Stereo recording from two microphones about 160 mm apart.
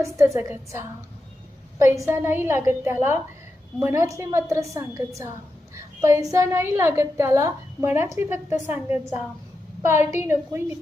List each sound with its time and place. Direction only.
0.0 s a woman's voice: 20° right (ahead or behind)
6.0 s child singing: 20° right (ahead or behind)
6.3 s a woman's voice: 15° right (ahead or behind)